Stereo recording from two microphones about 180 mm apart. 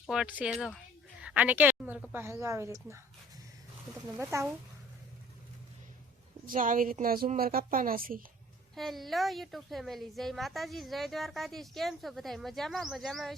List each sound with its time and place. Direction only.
0.0 s a woman's voice: 5° right (ahead or behind)
4.2 s speech: 15° right (ahead or behind)
6.5 s a woman's voice: 50° right (ahead or behind)
8.7 s a woman's voice: centre (ahead or behind)